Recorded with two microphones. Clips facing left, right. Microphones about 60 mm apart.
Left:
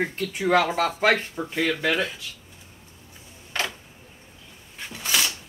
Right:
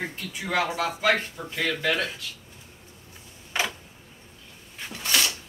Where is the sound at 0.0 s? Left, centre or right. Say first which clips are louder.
Left 8 dB; left.